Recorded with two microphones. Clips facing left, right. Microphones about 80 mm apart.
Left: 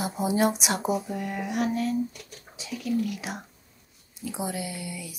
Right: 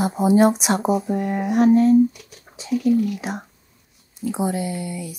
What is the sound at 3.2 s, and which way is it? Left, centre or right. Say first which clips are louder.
Speech: right 7 dB; right.